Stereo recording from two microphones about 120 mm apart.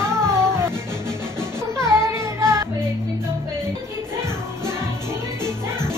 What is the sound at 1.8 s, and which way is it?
Music, 25° right (ahead or behind).